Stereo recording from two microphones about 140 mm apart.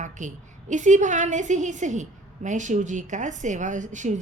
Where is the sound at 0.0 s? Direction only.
60° right (ahead or behind).